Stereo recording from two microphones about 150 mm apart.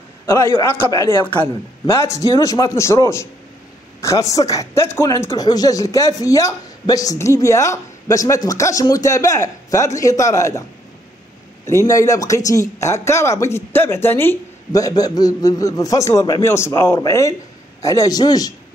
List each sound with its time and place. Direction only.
0.3 s speech: 15° left (ahead or behind)
11.6 s speech: 20° left (ahead or behind)